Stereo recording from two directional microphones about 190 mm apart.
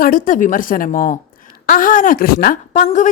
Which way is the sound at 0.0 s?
45° left (ahead or behind).